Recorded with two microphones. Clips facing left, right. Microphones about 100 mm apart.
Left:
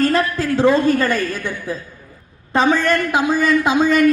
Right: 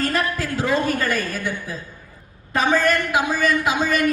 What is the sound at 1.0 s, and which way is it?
Speech, 25° left (ahead or behind).